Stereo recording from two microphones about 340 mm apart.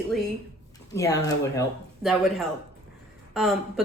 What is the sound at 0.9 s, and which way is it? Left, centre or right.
A woman's voice, centre.